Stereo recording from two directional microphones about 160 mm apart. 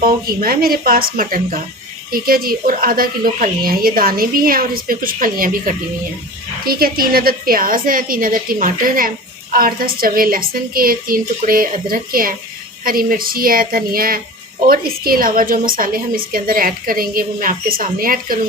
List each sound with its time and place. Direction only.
0.0 s a woman's voice: 65° right (ahead or behind)